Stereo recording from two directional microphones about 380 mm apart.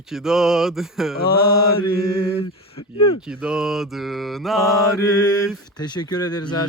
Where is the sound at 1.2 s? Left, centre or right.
Left.